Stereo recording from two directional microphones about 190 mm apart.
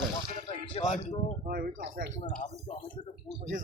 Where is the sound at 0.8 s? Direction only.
40° left (ahead or behind).